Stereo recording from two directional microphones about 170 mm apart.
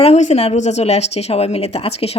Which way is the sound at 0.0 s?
40° left (ahead or behind).